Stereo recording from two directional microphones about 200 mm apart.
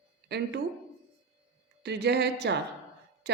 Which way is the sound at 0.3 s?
55° right (ahead or behind).